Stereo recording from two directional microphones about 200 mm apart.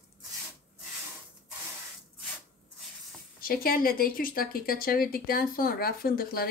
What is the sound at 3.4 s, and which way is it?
Speech, 45° left (ahead or behind).